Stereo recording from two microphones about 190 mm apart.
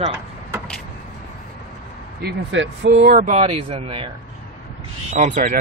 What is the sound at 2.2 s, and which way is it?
Speech, 75° right (ahead or behind).